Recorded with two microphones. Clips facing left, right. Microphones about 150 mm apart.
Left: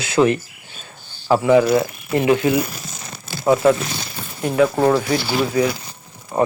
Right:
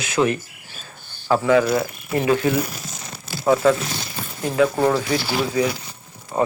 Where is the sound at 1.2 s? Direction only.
15° left (ahead or behind).